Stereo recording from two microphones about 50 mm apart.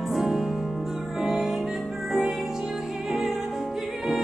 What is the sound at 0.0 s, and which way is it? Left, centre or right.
Music, centre.